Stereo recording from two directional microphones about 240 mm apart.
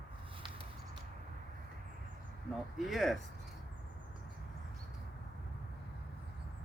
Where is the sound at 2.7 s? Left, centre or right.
Centre.